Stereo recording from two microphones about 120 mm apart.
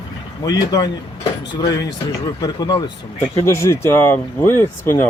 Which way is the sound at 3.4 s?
25° left (ahead or behind).